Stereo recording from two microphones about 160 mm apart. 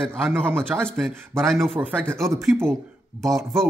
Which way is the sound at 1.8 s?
15° right (ahead or behind).